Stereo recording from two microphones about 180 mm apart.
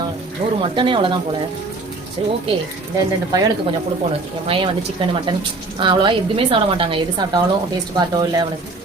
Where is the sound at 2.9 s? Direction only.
20° right (ahead or behind).